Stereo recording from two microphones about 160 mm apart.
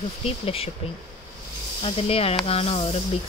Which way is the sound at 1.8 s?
35° left (ahead or behind).